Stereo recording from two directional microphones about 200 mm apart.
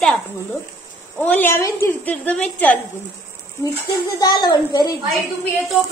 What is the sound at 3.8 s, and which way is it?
A child's voice, 20° left (ahead or behind).